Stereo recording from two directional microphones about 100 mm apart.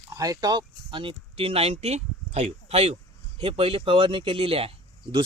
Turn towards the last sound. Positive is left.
turn(degrees=-70)  # may be behind; listen again after turning